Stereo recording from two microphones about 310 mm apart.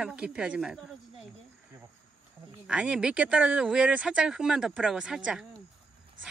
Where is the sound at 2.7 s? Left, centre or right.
Centre.